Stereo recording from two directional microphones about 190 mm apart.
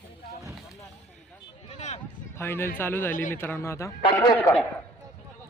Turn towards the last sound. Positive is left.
turn(degrees=10)  # may be behind; listen again after turning